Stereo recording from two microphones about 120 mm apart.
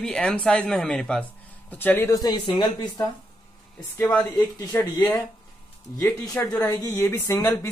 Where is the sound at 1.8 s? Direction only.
15° left (ahead or behind).